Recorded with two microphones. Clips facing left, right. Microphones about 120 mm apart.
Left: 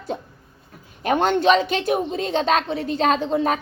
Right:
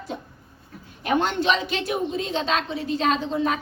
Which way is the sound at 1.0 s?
45° left (ahead or behind).